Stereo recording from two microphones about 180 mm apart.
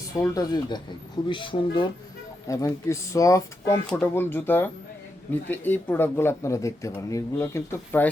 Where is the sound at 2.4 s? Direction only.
15° left (ahead or behind).